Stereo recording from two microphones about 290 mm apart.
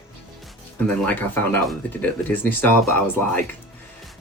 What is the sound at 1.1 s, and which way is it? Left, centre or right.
Speech, centre.